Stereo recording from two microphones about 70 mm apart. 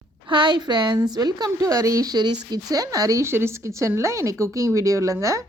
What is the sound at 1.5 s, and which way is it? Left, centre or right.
Speech, right.